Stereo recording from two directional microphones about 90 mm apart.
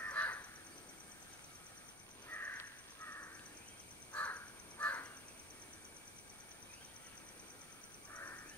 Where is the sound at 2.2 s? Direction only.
25° left (ahead or behind).